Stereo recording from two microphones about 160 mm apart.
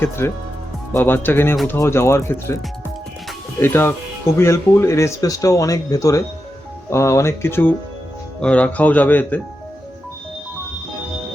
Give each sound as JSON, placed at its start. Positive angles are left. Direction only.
{"t": 0.2, "sound": "speech", "side_deg": 15}
{"t": 3.6, "sound": "speech", "side_deg": 15}